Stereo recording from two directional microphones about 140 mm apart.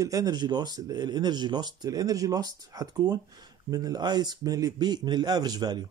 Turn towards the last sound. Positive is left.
turn(degrees=-30)  # may be behind; listen again after turning